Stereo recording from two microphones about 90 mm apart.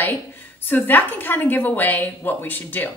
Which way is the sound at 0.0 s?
20° left (ahead or behind).